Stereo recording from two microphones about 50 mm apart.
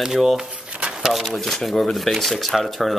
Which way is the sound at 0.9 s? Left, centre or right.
Centre.